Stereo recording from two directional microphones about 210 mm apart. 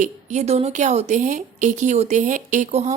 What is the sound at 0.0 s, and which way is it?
Speech, 35° right (ahead or behind).